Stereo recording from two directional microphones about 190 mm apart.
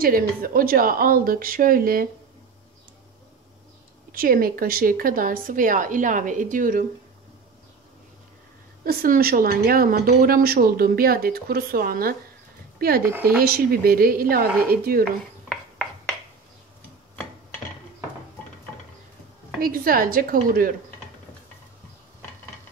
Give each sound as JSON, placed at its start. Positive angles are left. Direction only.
{"t": 0.0, "sound": "a woman's voice", "side_deg": -50}
{"t": 4.1, "sound": "a woman's voice", "side_deg": -50}
{"t": 8.8, "sound": "a woman's voice", "side_deg": -50}
{"t": 13.0, "sound": "speech", "side_deg": -10}
{"t": 13.4, "sound": "a woman's voice", "side_deg": -50}
{"t": 15.4, "sound": "a sound", "side_deg": 0}
{"t": 19.6, "sound": "a woman's voice", "side_deg": -50}